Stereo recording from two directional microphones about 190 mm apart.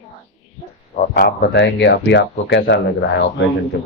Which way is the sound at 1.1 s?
60° left (ahead or behind).